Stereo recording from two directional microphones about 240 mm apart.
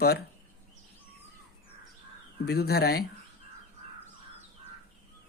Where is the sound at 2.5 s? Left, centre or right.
Left.